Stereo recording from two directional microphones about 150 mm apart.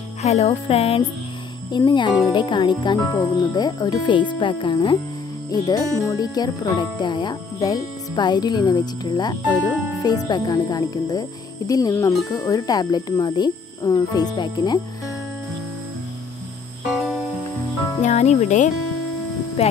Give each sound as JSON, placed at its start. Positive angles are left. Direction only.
{"t": 0.2, "sound": "music", "side_deg": 45}
{"t": 1.9, "sound": "speech", "side_deg": 30}
{"t": 5.5, "sound": "speech", "side_deg": 25}
{"t": 16.9, "sound": "music", "side_deg": 5}
{"t": 18.0, "sound": "speech", "side_deg": 50}
{"t": 19.6, "sound": "speech", "side_deg": 40}